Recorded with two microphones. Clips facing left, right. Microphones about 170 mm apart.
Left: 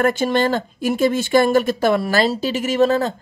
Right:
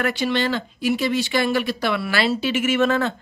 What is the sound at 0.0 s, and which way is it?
Speech, 45° left (ahead or behind).